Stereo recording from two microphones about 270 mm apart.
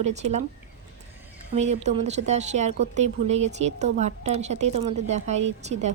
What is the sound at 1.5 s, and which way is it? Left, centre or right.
Speech, right.